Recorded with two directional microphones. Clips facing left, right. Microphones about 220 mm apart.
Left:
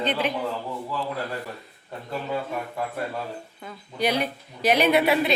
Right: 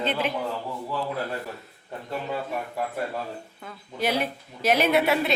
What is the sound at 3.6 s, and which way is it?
A woman's voice, centre (ahead or behind).